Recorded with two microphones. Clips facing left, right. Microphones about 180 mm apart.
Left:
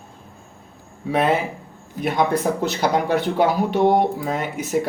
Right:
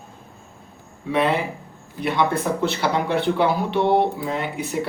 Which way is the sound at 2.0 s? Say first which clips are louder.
Left 2 dB; 45° left (ahead or behind).